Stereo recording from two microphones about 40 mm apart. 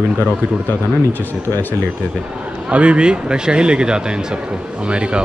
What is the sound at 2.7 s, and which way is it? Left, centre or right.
Speech, right.